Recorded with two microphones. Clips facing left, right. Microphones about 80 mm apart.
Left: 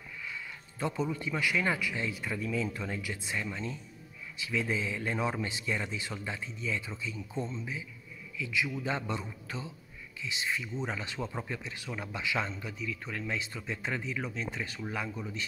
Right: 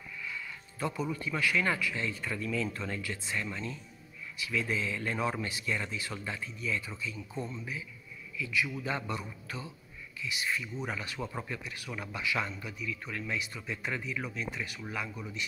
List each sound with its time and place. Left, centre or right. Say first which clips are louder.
0.2 s a man's voice: right 1 dB; left